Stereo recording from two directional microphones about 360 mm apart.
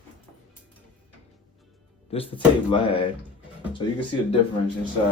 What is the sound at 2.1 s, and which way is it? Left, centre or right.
Speech, centre.